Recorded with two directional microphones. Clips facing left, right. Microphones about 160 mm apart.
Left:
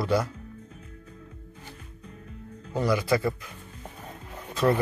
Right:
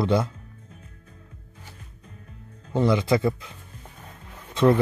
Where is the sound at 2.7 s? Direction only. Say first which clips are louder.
Right 3 dB; 25° right (ahead or behind).